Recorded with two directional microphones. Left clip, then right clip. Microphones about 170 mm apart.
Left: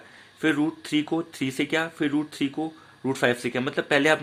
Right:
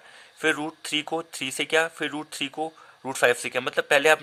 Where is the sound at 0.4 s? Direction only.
35° right (ahead or behind).